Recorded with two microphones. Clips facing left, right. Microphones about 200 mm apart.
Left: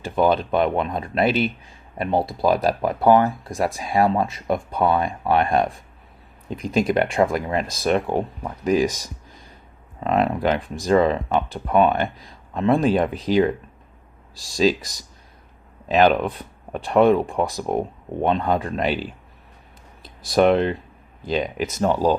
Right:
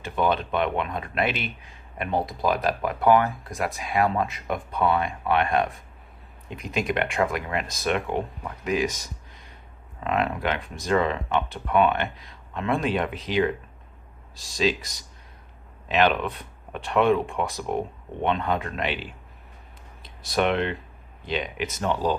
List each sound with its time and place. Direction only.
0.0 s speech: 35° left (ahead or behind)
14.5 s speech: 35° left (ahead or behind)
15.9 s speech: 40° left (ahead or behind)